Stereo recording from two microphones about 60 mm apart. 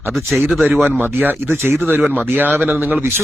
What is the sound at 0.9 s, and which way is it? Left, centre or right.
Speech, right.